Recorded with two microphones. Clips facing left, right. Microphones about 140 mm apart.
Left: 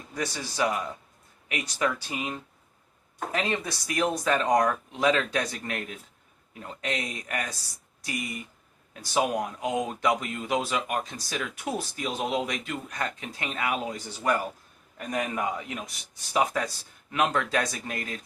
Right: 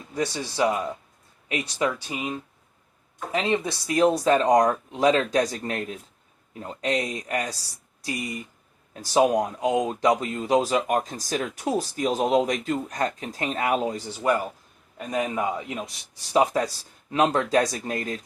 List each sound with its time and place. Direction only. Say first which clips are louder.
0.1 s speech: right 5 dB; 25° right (ahead or behind)
2.0 s speech: right 3 dB; 15° right (ahead or behind)
14.9 s speech: right 3 dB; 20° right (ahead or behind); by 18.2 s 35° right (ahead or behind)